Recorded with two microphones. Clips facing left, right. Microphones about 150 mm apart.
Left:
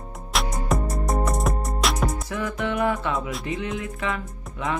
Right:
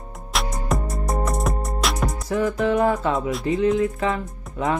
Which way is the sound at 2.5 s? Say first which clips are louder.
Right 4 dB; 35° right (ahead or behind).